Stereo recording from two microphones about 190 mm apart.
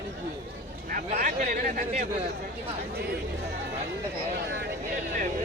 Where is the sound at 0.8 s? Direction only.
45° right (ahead or behind).